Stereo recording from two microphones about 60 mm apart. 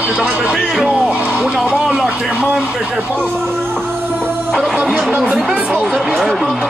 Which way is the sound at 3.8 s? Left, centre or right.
Right.